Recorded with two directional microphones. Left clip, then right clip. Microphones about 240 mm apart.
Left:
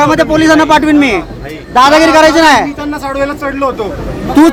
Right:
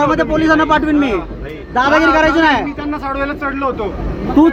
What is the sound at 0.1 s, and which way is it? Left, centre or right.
A man's voice, left.